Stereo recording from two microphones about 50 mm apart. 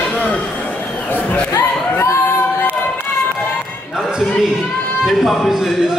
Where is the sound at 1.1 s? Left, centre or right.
Left.